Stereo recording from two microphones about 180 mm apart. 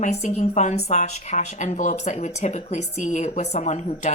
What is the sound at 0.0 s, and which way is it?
Speech, 40° left (ahead or behind).